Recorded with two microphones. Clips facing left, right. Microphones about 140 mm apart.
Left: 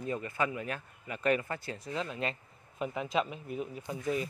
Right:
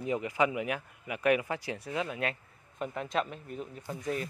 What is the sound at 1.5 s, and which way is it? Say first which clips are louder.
Speech: right 3 dB; 80° right.